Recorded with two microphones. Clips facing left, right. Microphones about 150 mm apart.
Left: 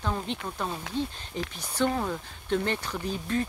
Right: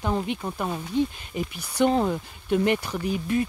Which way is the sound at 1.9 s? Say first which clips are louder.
Right 7 dB; 25° right (ahead or behind).